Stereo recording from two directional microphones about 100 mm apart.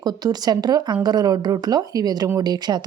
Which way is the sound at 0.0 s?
45° right (ahead or behind).